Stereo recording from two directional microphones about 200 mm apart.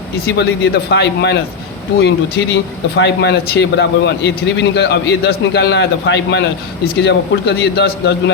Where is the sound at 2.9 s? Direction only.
60° left (ahead or behind).